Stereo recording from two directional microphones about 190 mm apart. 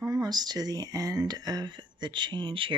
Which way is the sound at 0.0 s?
20° right (ahead or behind).